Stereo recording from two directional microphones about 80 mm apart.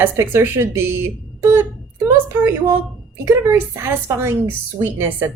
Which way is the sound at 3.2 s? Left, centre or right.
Right.